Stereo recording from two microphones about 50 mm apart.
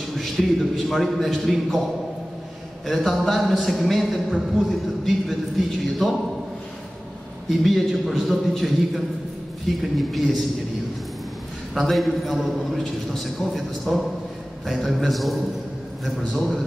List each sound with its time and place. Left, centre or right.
0.1 s a man's voice: centre
2.9 s a man's voice: centre
7.4 s a man's voice: centre
11.7 s a man's voice: centre